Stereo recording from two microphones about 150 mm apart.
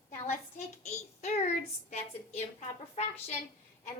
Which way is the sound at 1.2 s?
50° left (ahead or behind).